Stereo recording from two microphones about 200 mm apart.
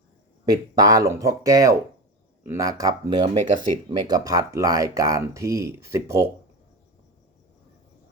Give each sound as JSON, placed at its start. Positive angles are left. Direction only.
{"t": 0.4, "sound": "speech", "side_deg": -20}